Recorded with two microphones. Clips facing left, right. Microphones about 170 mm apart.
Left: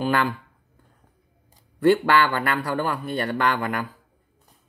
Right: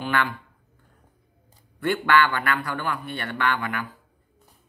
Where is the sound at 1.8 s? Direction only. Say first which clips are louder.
Left 3 dB; 35° left (ahead or behind).